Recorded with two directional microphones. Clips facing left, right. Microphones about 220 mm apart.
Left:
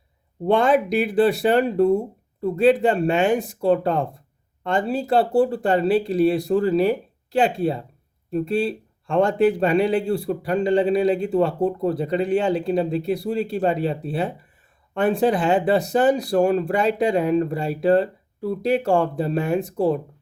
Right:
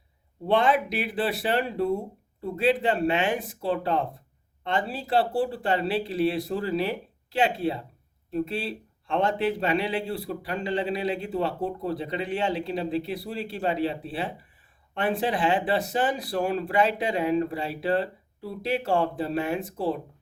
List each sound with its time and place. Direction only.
0.4 s a man's voice: 45° left (ahead or behind)